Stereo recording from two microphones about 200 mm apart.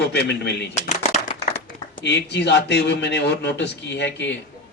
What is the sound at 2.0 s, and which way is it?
A man's voice, 60° left (ahead or behind).